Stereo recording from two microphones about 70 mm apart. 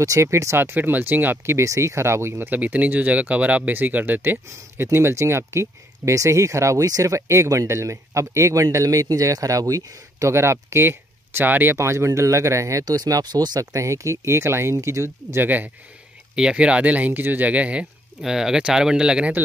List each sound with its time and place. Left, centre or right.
0.0 s speech: right
12.8 s speech: right
13.6 s speech: right
15.4 s speech: right
16.3 s speech: centre
18.2 s speech: centre